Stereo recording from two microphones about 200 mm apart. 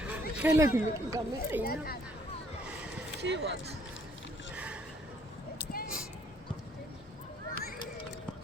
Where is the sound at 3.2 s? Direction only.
60° right (ahead or behind).